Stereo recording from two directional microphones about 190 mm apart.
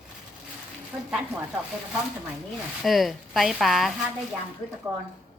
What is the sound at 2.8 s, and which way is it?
A woman's voice, centre (ahead or behind).